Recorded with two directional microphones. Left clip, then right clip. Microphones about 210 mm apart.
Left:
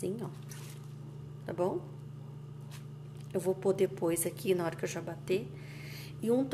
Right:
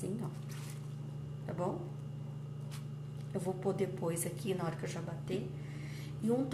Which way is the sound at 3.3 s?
45° left (ahead or behind).